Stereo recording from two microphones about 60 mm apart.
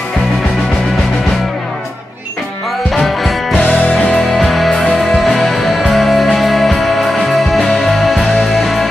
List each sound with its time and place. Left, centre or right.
2.9 s music: centre
3.6 s music: left
4.1 s music: centre